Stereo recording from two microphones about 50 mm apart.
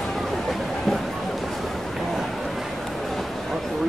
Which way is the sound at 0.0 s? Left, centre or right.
Centre.